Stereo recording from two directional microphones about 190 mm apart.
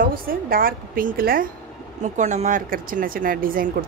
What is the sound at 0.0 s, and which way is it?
Speech, 50° right (ahead or behind).